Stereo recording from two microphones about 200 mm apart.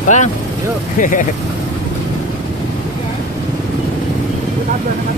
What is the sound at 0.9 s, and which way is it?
Speech, 40° left (ahead or behind).